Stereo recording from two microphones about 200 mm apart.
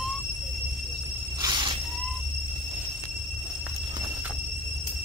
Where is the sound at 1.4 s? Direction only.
20° right (ahead or behind).